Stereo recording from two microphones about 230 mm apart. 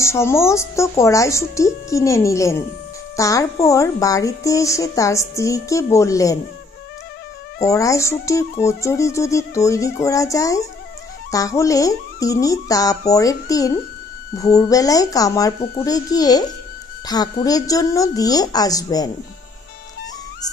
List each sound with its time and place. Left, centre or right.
0.0 s a woman's voice: centre
7.6 s a woman's voice: centre